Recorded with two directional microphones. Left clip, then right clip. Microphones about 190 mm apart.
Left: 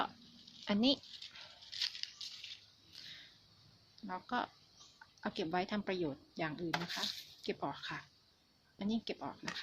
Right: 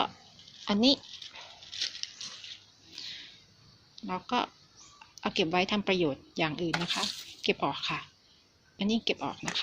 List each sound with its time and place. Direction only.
0.6 s speech: 5° left (ahead or behind)
1.7 s a sound: 15° right (ahead or behind)
4.0 s speech: centre (ahead or behind)